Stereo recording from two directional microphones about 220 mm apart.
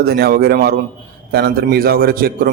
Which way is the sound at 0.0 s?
45° right (ahead or behind).